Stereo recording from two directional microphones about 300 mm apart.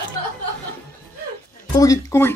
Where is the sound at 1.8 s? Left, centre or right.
Centre.